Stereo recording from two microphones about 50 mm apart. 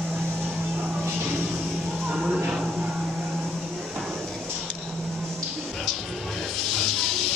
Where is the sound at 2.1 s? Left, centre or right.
Centre.